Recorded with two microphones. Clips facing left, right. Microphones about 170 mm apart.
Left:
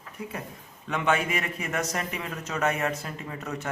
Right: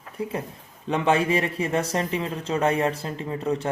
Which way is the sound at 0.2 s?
30° right (ahead or behind).